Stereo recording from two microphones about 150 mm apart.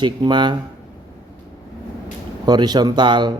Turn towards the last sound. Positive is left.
turn(degrees=-30)  # may be behind; listen again after turning